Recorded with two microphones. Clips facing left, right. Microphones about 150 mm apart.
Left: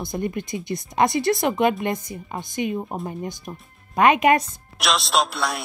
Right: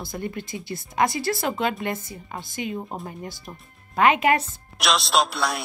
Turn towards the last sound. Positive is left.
turn(degrees=0)  # may be behind; listen again after turning